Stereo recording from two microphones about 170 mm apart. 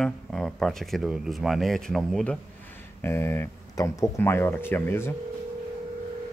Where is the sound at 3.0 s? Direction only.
15° left (ahead or behind).